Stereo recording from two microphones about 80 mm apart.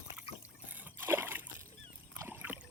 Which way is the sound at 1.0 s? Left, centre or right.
Right.